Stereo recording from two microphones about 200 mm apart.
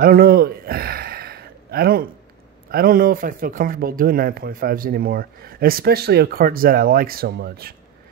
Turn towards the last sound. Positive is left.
turn(degrees=-50)  # may be behind; listen again after turning